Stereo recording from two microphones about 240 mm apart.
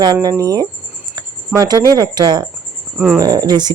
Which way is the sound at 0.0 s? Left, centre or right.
Centre.